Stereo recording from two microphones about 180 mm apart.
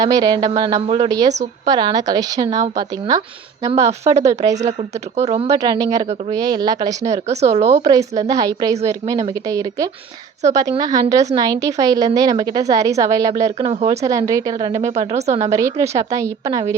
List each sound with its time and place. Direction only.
0.0 s speech: 20° right (ahead or behind)
5.5 s speech: 20° right (ahead or behind)
7.3 s speech: 35° right (ahead or behind)
7.9 s speech: 20° right (ahead or behind)
13.7 s speech: 30° right (ahead or behind)
14.0 s speech: 20° right (ahead or behind)
14.9 s speech: 35° right (ahead or behind)
15.5 s a woman's voice: 15° right (ahead or behind)